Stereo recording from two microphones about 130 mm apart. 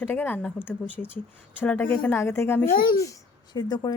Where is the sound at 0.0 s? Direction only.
15° left (ahead or behind).